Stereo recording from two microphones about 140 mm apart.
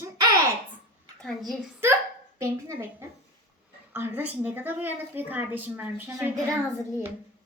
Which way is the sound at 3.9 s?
15° right (ahead or behind).